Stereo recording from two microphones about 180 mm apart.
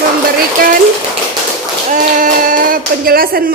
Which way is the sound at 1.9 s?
45° right (ahead or behind).